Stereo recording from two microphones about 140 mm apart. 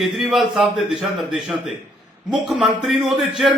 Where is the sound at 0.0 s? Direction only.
Centre (ahead or behind).